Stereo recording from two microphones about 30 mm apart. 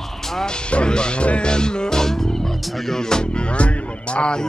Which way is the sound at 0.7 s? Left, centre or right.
Left.